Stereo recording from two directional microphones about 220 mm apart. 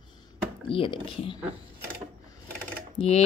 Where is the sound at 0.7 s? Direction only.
25° left (ahead or behind).